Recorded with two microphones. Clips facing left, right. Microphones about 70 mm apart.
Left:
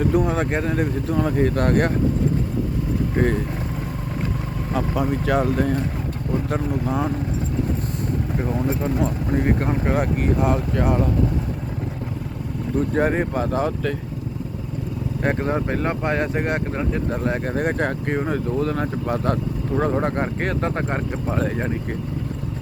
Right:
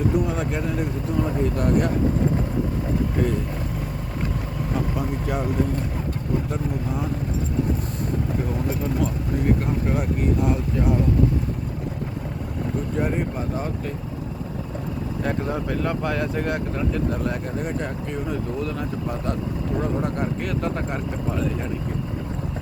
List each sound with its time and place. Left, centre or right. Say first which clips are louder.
0.1 s speech: left 3 dB; left
3.2 s speech: left 5 dB; left
4.9 s speech: left 5 dB; left
6.5 s speech: left 4 dB; left
8.6 s speech: left 3 dB; left
9.4 s speech: even; left
9.9 s speech: left 2 dB; left
12.9 s speech: left 5 dB; left
15.2 s speech: left 4 dB; left
17.4 s speech: left 5 dB; left
19.8 s speech: left 5 dB; left
21.4 s speech: left 2 dB; left